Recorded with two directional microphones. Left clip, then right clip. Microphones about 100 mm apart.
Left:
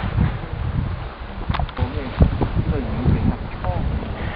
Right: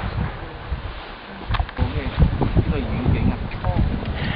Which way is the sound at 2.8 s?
5° right (ahead or behind).